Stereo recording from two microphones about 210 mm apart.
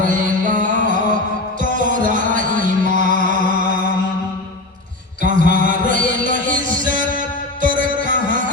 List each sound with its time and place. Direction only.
0.0 s music: 40° right (ahead or behind)
5.2 s music: 40° right (ahead or behind)